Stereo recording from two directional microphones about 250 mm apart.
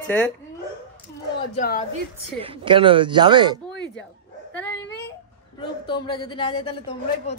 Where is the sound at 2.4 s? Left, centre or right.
Right.